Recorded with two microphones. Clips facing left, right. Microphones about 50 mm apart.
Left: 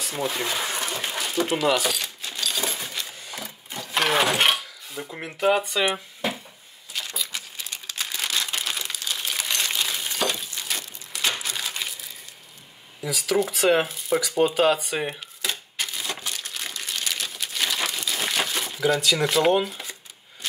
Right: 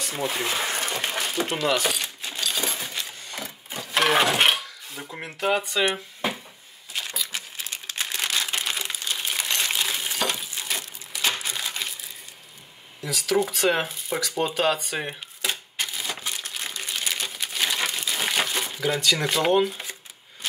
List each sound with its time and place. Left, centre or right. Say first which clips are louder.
0.3 s speech: right 1 dB; centre
0.8 s a sound: right 1 dB; centre
1.6 s keys jangling: left 1 dB; centre
5.9 s a sound: even; centre
7.1 s crumpling: right 1 dB; centre
13.0 s speech: even; centre
15.5 s crumpling: even; centre